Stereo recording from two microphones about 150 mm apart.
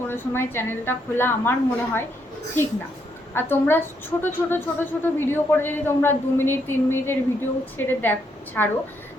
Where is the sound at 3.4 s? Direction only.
15° left (ahead or behind).